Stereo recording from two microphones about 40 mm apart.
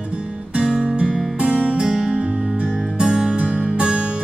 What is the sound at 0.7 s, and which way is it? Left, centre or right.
Music, right.